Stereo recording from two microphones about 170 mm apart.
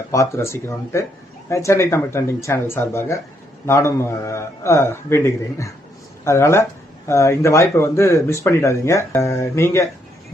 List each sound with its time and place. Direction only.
0.1 s speech: 15° left (ahead or behind)